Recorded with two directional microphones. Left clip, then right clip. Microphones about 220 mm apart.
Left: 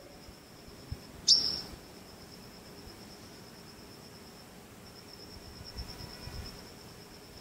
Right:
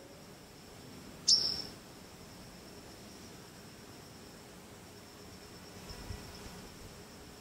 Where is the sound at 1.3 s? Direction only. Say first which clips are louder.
Left 3 dB; 30° left (ahead or behind).